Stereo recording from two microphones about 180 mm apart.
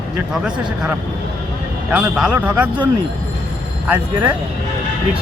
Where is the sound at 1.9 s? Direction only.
5° right (ahead or behind).